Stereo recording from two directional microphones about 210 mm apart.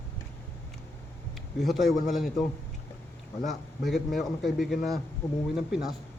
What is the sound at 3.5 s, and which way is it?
A man's voice, centre (ahead or behind).